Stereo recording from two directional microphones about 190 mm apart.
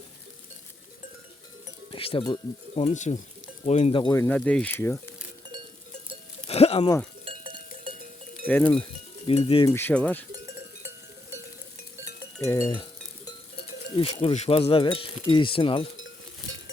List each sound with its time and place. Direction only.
1.9 s speech: 30° left (ahead or behind); by 5.1 s 10° left (ahead or behind)
6.5 s a sound: 30° left (ahead or behind)
7.3 s cowbell: 30° right (ahead or behind)
8.4 s speech: 10° left (ahead or behind)
9.2 s speech: 30° left (ahead or behind)
9.6 s speech: 10° left (ahead or behind)
10.3 s cowbell: 15° right (ahead or behind)
12.5 s a sound: 15° left (ahead or behind)
13.9 s speech: 30° left (ahead or behind)
16.0 s a sound: 80° left